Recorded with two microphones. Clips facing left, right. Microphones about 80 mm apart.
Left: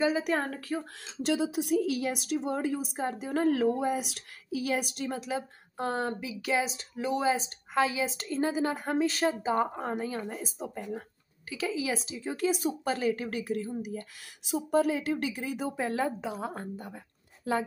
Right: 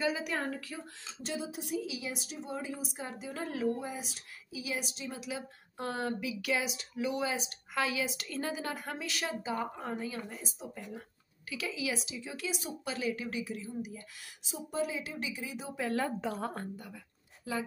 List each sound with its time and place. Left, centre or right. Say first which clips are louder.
0.0 s a woman's voice: left 6 dB; left
1.2 s a woman's voice: left 10 dB; left
5.2 s a woman's voice: left 6 dB; left
16.2 s speech: left 1 dB; centre
17.5 s speech: left 7 dB; left